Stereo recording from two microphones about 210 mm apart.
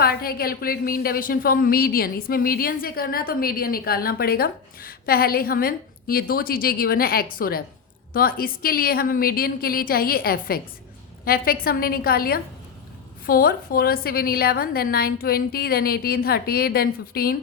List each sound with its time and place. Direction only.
0.0 s a woman's voice: 45° left (ahead or behind)